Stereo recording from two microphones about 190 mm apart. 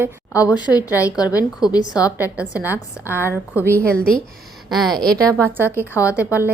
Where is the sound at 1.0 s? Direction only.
20° left (ahead or behind).